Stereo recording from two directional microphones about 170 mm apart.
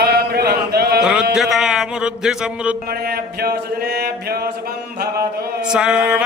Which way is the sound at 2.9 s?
60° right (ahead or behind).